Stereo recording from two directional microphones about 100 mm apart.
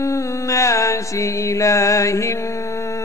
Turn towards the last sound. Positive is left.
turn(degrees=30)  # may be behind; listen again after turning